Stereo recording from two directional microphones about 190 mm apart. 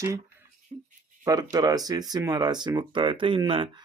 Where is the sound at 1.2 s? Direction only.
20° right (ahead or behind).